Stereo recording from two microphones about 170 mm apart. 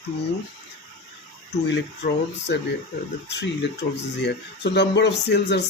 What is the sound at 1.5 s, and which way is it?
Speech, 90° left.